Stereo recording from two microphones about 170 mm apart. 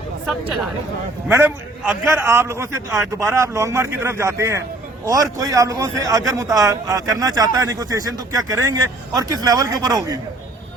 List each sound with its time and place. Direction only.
1.3 s a man's voice: 10° right (ahead or behind)